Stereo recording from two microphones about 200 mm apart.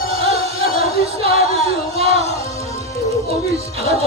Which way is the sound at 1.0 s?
30° right (ahead or behind).